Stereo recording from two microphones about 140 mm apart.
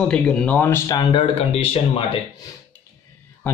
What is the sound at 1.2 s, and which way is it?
Speech, 45° left (ahead or behind).